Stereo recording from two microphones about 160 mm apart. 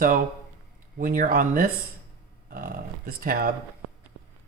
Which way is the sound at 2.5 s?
65° right (ahead or behind).